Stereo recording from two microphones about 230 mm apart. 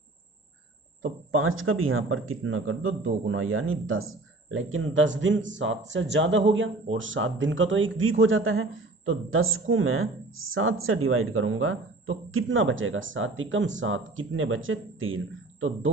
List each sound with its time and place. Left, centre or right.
1.0 s speech: right